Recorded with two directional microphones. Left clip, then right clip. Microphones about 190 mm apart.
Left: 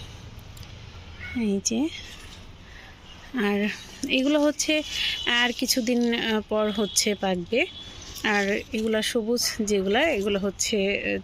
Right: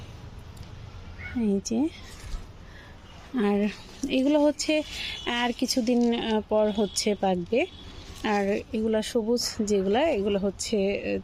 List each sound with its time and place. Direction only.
1.4 s speech: 10° right (ahead or behind)
3.3 s speech: 10° right (ahead or behind)